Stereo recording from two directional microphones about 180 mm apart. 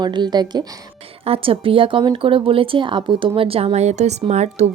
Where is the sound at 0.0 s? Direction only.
25° right (ahead or behind).